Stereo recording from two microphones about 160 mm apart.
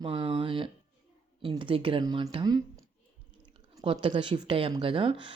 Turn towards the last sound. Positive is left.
turn(degrees=-30)  # may be behind; listen again after turning